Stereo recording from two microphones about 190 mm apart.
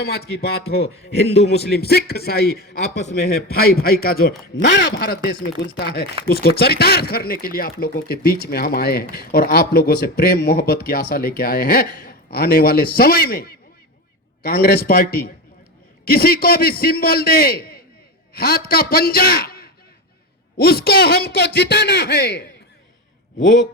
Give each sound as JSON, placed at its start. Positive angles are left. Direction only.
{"t": 0.0, "sound": "a man's voice", "side_deg": 55}